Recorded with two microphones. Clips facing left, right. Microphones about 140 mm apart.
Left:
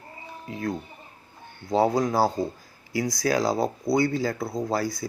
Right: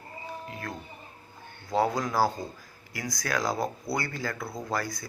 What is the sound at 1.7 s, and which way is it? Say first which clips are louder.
Speech: left 5 dB; 25° left (ahead or behind).